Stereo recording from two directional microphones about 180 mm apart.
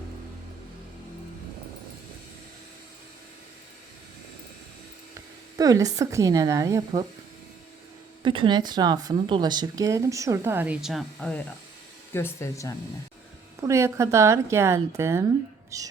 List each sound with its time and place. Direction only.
5.5 s speech: 20° right (ahead or behind)
8.2 s speech: 30° right (ahead or behind); by 12.7 s 15° left (ahead or behind)
13.6 s a woman's voice: 15° right (ahead or behind)